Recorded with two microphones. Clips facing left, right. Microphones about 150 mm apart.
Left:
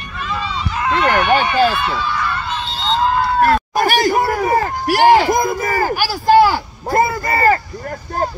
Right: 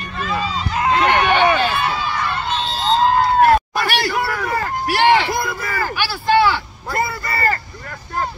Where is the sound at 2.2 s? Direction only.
20° right (ahead or behind).